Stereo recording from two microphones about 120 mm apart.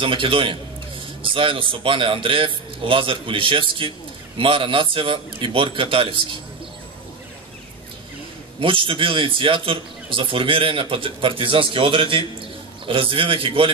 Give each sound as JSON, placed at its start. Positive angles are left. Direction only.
{"t": 0.0, "sound": "speech", "side_deg": -45}
{"t": 8.5, "sound": "speech", "side_deg": -45}